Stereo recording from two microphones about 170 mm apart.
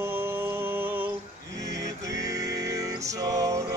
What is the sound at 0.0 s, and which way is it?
Music, 15° right (ahead or behind).